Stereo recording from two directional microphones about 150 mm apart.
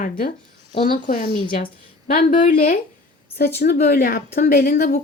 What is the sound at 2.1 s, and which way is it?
A woman's voice, 80° left.